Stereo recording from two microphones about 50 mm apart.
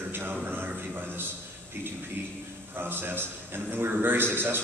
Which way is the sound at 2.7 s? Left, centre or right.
Right.